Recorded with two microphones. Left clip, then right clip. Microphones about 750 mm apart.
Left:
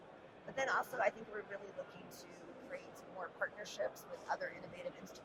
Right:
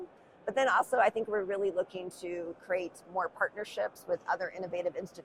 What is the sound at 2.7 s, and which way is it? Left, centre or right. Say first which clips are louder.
Speech: right 17 dB; right.